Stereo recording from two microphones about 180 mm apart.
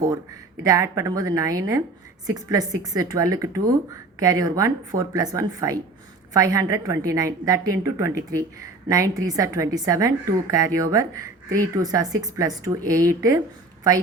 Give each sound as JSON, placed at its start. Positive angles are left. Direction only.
{"t": 0.6, "sound": "a woman's voice", "side_deg": -15}